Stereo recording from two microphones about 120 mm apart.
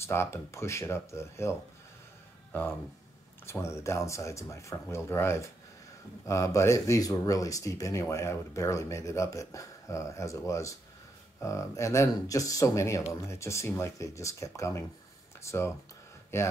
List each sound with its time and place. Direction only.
0.0 s speech: 20° left (ahead or behind)
3.4 s speech: 20° left (ahead or behind)